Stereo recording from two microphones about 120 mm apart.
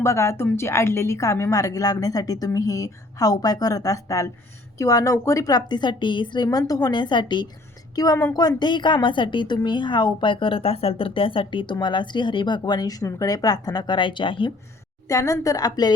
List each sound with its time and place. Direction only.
0.0 s a woman's voice: 25° left (ahead or behind); by 14.5 s 45° left (ahead or behind)
15.0 s a woman's voice: 25° left (ahead or behind)